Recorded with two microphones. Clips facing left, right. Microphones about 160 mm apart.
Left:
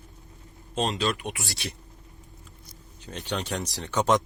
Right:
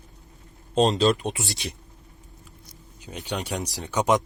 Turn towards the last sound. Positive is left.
turn(degrees=-10)  # may be behind; listen again after turning